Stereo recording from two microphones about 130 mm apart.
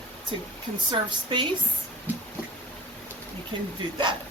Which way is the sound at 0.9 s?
40° right (ahead or behind).